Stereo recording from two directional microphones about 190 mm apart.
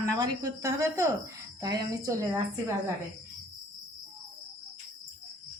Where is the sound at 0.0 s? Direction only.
20° right (ahead or behind).